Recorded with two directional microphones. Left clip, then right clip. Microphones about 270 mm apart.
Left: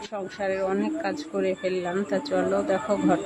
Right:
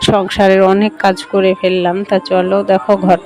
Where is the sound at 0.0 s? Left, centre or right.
Right.